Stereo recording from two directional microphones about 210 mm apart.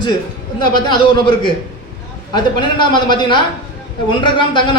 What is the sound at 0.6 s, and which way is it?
A man's voice, 20° left (ahead or behind).